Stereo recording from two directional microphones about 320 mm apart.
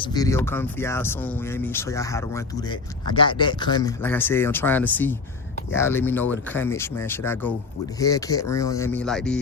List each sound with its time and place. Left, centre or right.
0.0 s speech: centre